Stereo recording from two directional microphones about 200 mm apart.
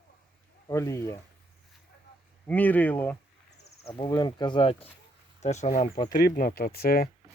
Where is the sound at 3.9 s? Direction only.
20° left (ahead or behind).